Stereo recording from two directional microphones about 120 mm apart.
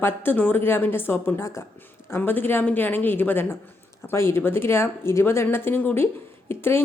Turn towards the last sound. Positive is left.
turn(degrees=20)  # may be behind; listen again after turning